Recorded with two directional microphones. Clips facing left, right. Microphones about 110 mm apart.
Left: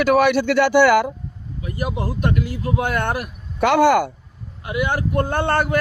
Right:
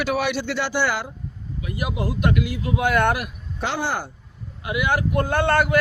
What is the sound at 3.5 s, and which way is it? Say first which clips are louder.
Speech: left 11 dB; 60° left (ahead or behind).